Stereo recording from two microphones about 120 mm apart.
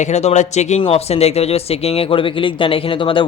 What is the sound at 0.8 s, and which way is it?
Speech, 55° left (ahead or behind).